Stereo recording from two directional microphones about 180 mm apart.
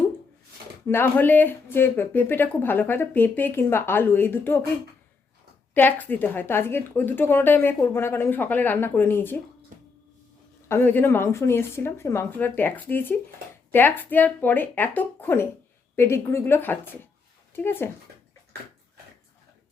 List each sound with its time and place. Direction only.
0.9 s speech: 10° left (ahead or behind)
5.7 s speech: 10° left (ahead or behind)
10.7 s speech: 10° left (ahead or behind)